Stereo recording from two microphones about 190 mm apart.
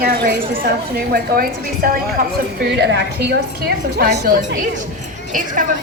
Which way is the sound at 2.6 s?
65° right (ahead or behind).